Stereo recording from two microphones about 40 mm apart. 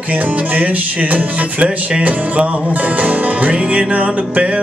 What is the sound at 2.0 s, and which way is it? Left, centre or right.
Music, right.